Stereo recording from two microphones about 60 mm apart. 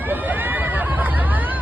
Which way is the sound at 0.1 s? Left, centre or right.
Right.